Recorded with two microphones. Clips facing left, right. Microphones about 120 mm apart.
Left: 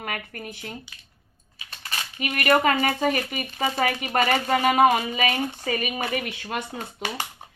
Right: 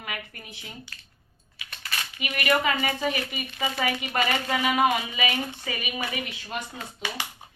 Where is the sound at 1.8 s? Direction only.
40° left (ahead or behind).